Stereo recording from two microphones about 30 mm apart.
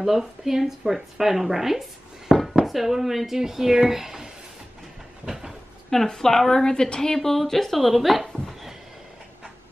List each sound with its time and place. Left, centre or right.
0.5 s a woman's voice: centre
5.9 s speech: centre
6.6 s a woman's voice: left
7.2 s speech: centre
7.9 s speech: centre